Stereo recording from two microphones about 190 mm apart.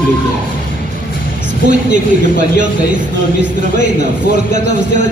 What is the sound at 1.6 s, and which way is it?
Speech, 40° right (ahead or behind).